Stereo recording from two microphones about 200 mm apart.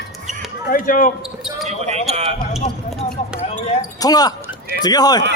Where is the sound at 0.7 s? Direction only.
45° left (ahead or behind).